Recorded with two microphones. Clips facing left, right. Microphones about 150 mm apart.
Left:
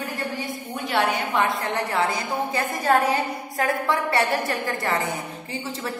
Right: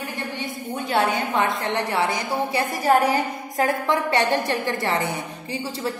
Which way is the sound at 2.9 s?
15° right (ahead or behind).